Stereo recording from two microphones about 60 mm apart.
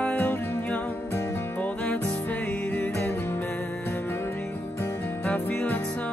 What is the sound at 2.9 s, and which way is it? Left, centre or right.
Music, left.